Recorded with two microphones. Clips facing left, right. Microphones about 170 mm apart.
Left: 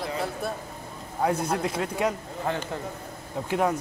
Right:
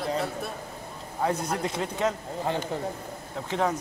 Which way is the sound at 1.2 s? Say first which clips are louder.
Left 2 dB; 5° left (ahead or behind).